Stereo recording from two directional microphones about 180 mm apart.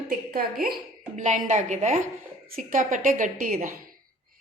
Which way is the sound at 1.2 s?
45° right (ahead or behind).